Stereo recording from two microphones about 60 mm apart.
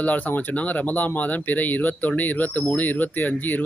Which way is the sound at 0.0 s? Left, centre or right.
Left.